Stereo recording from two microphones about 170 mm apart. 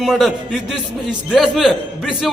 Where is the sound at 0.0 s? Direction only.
Centre (ahead or behind).